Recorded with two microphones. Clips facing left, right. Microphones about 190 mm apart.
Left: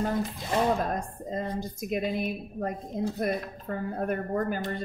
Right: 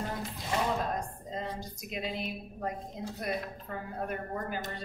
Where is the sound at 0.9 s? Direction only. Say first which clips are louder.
Left 4 dB; 50° left (ahead or behind).